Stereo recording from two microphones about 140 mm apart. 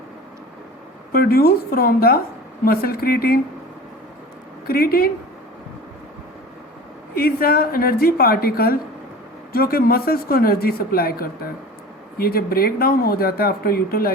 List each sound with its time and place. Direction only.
1.1 s speech: 90° left
4.6 s speech: 90° left
7.1 s speech: 90° left